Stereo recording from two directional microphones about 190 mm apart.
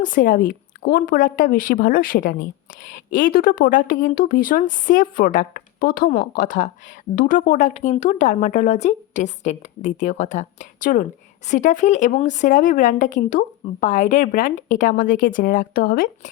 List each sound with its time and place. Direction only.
0.0 s a woman's voice: 45° left (ahead or behind)